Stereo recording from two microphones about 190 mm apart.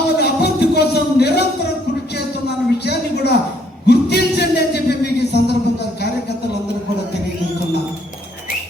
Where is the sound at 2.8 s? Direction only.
60° left (ahead or behind).